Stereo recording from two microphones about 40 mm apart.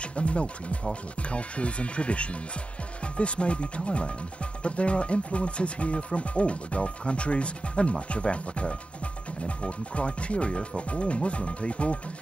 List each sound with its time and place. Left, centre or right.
0.0 s speech: left